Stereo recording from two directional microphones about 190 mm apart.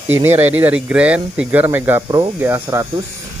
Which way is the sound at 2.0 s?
25° right (ahead or behind).